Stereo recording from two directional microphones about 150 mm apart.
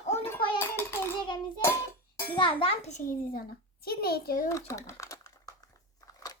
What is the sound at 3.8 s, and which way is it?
Speech, 90° left.